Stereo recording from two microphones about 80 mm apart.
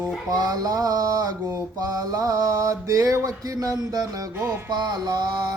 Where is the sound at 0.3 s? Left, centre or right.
Right.